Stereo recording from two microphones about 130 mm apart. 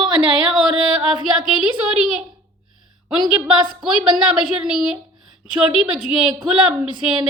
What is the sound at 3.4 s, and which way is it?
Speech, 35° right (ahead or behind).